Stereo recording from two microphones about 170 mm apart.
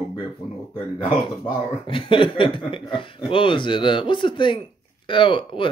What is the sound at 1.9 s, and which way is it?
Speech, 30° left (ahead or behind).